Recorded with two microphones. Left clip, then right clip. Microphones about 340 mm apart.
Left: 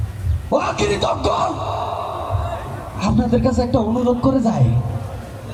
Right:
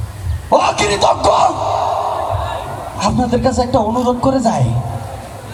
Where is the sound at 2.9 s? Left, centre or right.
Right.